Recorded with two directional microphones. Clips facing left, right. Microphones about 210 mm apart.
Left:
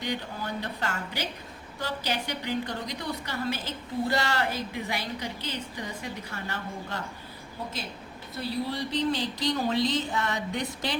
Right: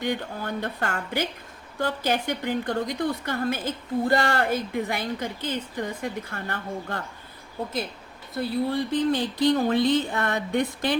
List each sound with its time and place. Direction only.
0.0 s a woman's voice: 50° right (ahead or behind)
8.4 s speech: 55° right (ahead or behind)